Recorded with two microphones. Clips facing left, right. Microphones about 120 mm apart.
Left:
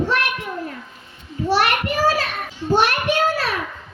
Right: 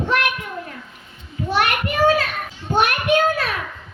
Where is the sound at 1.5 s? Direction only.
35° left (ahead or behind).